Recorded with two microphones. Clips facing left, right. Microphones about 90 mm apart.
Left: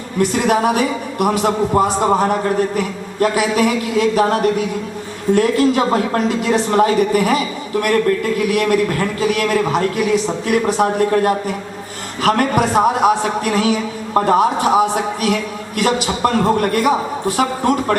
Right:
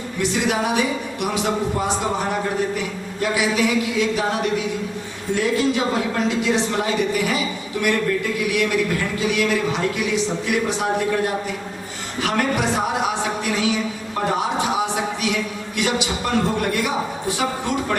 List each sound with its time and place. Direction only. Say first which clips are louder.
0.2 s a man's voice: left 6 dB; 45° left (ahead or behind)